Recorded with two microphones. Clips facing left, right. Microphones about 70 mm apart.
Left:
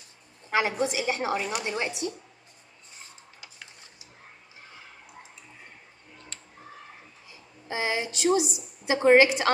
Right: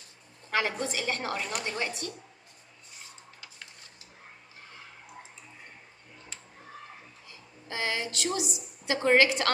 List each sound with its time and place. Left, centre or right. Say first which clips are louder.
0.5 s a woman's voice: left 4 dB; centre
3.3 s a sound: left 1 dB; centre
7.2 s a woman's voice: left 5 dB; centre